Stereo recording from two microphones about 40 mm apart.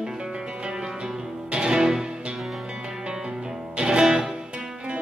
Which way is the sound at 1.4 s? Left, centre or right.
Right.